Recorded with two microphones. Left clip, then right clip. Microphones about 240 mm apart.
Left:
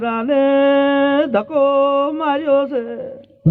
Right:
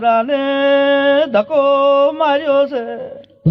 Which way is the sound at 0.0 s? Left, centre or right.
Right.